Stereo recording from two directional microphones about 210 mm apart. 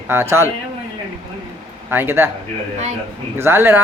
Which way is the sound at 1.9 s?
10° right (ahead or behind).